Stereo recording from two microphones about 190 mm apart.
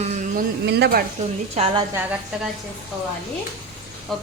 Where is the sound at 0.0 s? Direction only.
40° right (ahead or behind).